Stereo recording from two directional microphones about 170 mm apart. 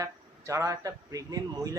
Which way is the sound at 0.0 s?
15° right (ahead or behind).